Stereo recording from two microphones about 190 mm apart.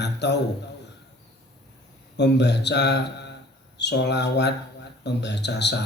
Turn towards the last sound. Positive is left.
turn(degrees=65)  # may be behind; listen again after turning